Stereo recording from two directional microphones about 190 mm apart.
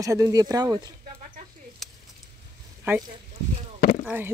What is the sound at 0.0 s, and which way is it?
Speech, 15° right (ahead or behind).